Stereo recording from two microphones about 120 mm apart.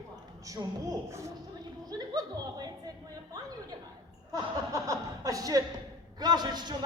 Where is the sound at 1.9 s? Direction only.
35° right (ahead or behind).